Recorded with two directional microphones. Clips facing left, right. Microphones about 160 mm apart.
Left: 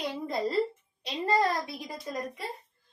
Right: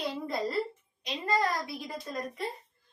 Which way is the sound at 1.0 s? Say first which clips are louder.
Left 3 dB; 30° left (ahead or behind).